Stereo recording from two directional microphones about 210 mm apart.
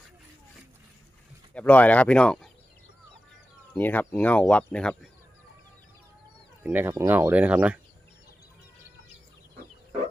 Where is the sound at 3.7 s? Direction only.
10° left (ahead or behind).